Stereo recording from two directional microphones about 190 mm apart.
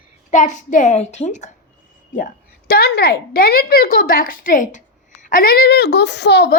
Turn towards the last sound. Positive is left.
turn(degrees=60)  # may be behind; listen again after turning